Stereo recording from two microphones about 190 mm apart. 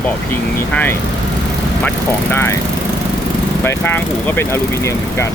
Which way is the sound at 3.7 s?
10° left (ahead or behind).